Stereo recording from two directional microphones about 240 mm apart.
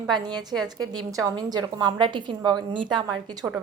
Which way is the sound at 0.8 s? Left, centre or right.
Centre.